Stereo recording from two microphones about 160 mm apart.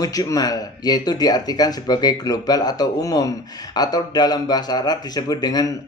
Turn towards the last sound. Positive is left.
turn(degrees=25)  # may be behind; listen again after turning